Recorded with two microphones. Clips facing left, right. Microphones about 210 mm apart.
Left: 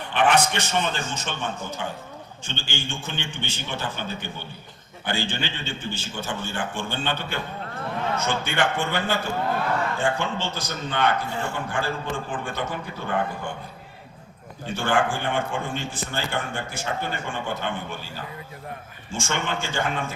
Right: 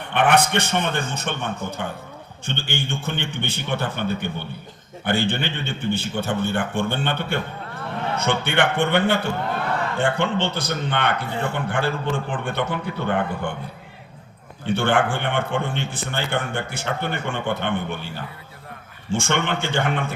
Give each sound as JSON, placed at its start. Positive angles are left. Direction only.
{"t": 0.0, "sound": "a man's voice", "side_deg": -60}
{"t": 14.7, "sound": "a man's voice", "side_deg": -60}
{"t": 19.1, "sound": "a man's voice", "side_deg": -65}